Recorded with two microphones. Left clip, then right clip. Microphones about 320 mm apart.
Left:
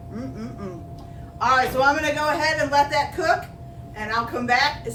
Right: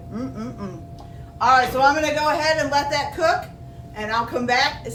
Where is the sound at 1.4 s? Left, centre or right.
Centre.